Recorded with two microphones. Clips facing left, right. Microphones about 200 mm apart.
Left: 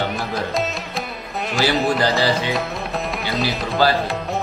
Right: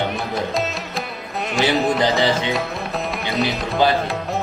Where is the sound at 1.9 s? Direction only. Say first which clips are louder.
Right 1 dB; 20° right (ahead or behind).